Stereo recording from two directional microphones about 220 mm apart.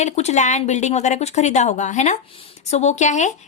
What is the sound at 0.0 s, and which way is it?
A woman's voice, 30° left (ahead or behind).